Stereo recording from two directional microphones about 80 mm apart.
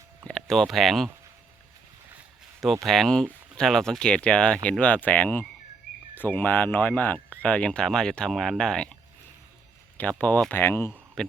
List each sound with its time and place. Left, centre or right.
0.3 s speech: centre
2.8 s speech: centre
10.0 s speech: centre
10.5 s speech: left
11.2 s speech: centre